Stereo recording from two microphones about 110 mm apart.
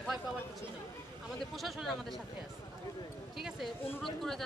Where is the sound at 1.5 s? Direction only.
Centre (ahead or behind).